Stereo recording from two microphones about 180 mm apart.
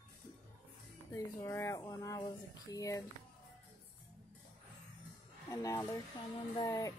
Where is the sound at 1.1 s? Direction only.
15° left (ahead or behind).